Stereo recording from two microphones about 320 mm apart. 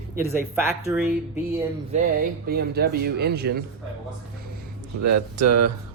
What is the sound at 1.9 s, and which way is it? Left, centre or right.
Speech, right.